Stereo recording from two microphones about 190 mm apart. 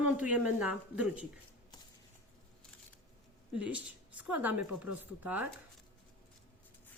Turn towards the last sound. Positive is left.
turn(degrees=-10)  # may be behind; listen again after turning